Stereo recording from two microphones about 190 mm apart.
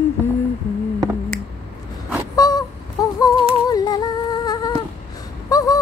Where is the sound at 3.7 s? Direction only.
20° left (ahead or behind).